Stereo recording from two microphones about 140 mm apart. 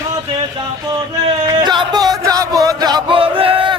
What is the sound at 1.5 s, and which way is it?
Music, 30° right (ahead or behind).